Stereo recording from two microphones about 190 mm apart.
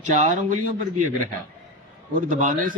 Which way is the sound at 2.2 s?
45° right (ahead or behind).